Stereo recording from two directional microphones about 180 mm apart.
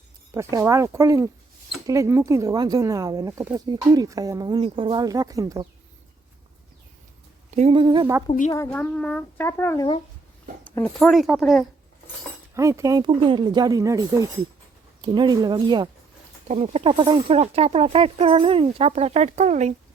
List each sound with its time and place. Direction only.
0.5 s speech: 15° right (ahead or behind)
7.5 s speech: 35° right (ahead or behind)
8.3 s speech: 40° left (ahead or behind)
8.5 s a child's voice: 15° left (ahead or behind)
12.5 s speech: 15° right (ahead or behind)
16.5 s speech: 40° right (ahead or behind)